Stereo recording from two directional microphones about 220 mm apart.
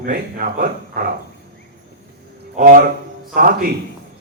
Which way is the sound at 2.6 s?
40° right (ahead or behind).